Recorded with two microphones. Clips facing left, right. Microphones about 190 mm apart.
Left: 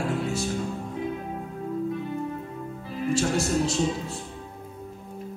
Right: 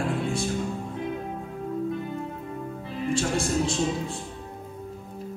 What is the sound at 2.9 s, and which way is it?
Speech, 5° left (ahead or behind).